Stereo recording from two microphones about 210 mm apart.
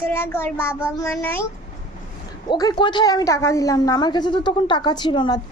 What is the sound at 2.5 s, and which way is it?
A woman's voice, 20° left (ahead or behind).